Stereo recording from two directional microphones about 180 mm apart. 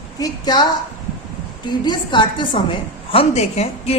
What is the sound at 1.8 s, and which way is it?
A woman's voice, 25° left (ahead or behind).